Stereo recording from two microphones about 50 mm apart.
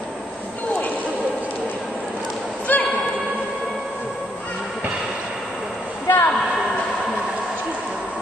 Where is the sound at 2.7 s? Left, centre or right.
Left.